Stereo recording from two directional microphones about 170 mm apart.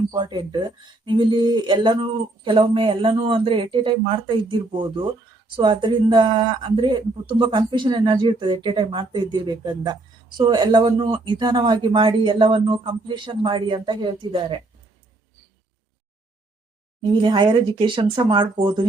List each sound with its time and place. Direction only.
0.1 s speech: 25° right (ahead or behind)
17.2 s speech: 30° right (ahead or behind)